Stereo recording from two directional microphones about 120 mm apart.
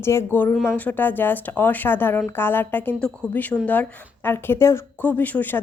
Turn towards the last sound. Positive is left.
turn(degrees=15)  # may be behind; listen again after turning